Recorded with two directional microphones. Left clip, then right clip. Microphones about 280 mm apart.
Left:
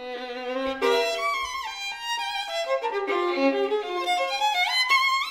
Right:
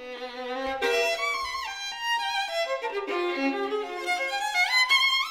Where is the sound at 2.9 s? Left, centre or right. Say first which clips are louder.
Left 3 dB; centre.